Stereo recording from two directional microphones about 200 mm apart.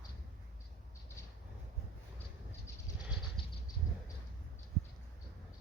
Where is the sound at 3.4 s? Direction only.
25° left (ahead or behind).